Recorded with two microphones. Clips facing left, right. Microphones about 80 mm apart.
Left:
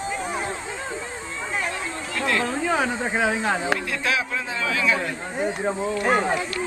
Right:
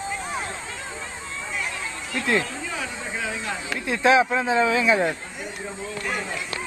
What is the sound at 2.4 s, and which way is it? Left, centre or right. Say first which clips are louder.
Speech: left 8 dB; left.